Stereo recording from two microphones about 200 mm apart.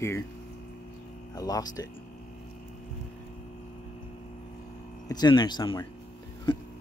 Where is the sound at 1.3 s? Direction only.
20° left (ahead or behind).